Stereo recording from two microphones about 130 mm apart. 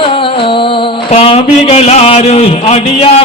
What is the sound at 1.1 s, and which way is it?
Speech, 50° left (ahead or behind).